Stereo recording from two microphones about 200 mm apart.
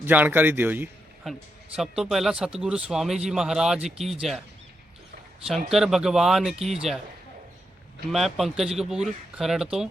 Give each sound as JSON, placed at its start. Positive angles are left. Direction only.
{"t": 0.0, "sound": "a man's voice", "side_deg": -10}
{"t": 5.5, "sound": "a man's voice", "side_deg": 0}
{"t": 8.1, "sound": "a man's voice", "side_deg": 0}